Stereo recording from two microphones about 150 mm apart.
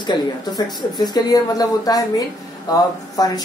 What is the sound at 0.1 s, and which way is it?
Speech, 30° left (ahead or behind).